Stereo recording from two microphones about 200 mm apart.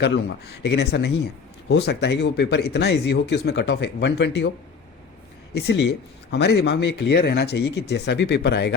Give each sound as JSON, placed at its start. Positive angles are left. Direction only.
{"t": 0.0, "sound": "speech", "side_deg": 55}
{"t": 5.5, "sound": "speech", "side_deg": 60}